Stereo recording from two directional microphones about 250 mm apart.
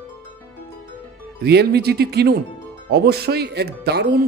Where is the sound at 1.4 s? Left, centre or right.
Right.